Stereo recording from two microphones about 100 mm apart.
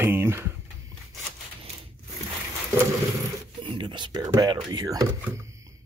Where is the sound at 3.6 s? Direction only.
55° right (ahead or behind); by 5.7 s 30° right (ahead or behind).